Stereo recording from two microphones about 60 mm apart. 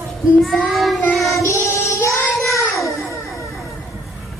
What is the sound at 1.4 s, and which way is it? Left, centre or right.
Child singing, left.